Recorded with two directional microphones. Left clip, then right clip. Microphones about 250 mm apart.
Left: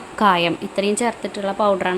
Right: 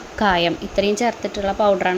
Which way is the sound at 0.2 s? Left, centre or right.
Centre.